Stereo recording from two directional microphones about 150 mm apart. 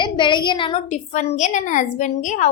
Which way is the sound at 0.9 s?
50° left (ahead or behind).